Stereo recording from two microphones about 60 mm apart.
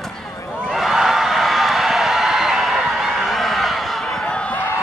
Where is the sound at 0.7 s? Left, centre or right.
Centre.